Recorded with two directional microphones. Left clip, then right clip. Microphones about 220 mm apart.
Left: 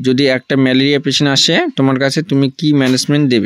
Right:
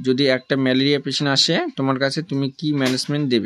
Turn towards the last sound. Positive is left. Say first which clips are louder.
# left 8 dB
turn(degrees=35)  # may be behind; listen again after turning